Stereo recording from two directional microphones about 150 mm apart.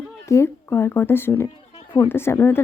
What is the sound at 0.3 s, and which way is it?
A woman's voice, 20° left (ahead or behind).